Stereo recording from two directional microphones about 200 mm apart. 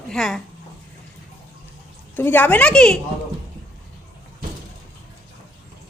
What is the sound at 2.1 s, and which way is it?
Speech, 10° left (ahead or behind).